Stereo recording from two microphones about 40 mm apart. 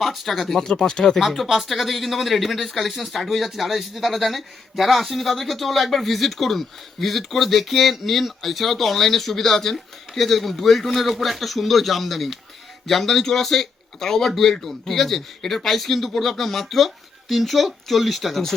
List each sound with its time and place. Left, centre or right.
0.0 s speech: centre
1.2 s speech: centre